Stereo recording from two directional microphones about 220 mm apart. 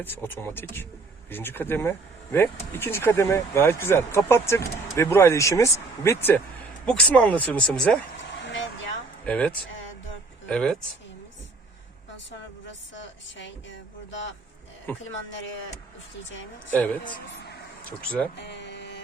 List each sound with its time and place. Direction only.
0.0 s speech: 10° left (ahead or behind)
8.4 s vehicle: 55° left (ahead or behind)
9.2 s speech: 5° left (ahead or behind)
13.0 s speech: 55° left (ahead or behind)
14.9 s speech: 10° left (ahead or behind)
16.3 s speech: 60° left (ahead or behind)
17.8 s speech: 5° left (ahead or behind)
18.3 s a sound: 50° left (ahead or behind)